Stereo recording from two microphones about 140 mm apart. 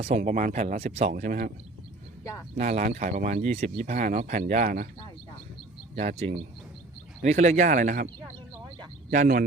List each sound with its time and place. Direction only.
0.2 s speech: 65° right (ahead or behind); by 1.1 s 50° right (ahead or behind)
1.1 s speech: 80° right
2.6 s speech: 60° right (ahead or behind); by 3.4 s 85° right
3.5 s speech: 55° right (ahead or behind); by 4.9 s 75° right (ahead or behind)
6.0 s speech: 50° right (ahead or behind)
9.0 s speech: 80° right